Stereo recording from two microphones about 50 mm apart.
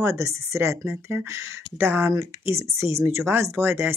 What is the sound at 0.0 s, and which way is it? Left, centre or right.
Speech, right.